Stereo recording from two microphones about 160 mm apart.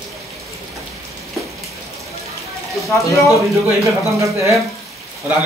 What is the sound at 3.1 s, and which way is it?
Speech, 20° left (ahead or behind).